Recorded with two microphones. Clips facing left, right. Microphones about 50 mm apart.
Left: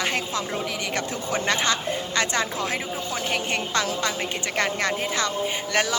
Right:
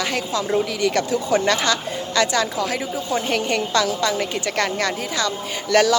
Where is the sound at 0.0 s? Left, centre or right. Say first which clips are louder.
Right 3 dB; left.